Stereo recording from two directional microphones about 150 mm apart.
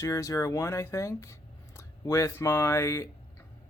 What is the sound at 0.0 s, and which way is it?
Speech, 20° left (ahead or behind).